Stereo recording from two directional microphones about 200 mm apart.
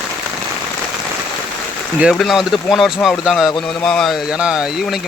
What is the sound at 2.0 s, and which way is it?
Speech, centre (ahead or behind).